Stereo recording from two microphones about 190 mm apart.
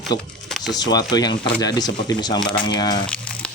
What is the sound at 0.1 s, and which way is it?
Speech, 20° left (ahead or behind).